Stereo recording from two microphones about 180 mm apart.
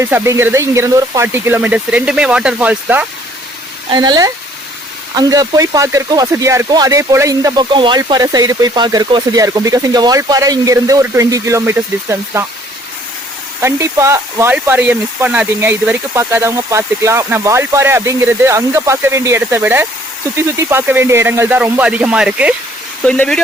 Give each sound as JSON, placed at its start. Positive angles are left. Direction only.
{"t": 0.0, "sound": "speech", "side_deg": -15}
{"t": 3.8, "sound": "speech", "side_deg": -25}
{"t": 13.6, "sound": "speech", "side_deg": -15}
{"t": 23.0, "sound": "speech", "side_deg": 5}